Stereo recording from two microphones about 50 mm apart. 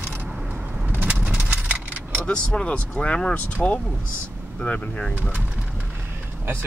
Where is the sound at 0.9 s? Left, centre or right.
Right.